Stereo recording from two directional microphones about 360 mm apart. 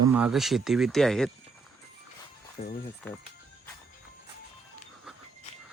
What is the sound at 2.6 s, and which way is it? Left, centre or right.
Speech, centre.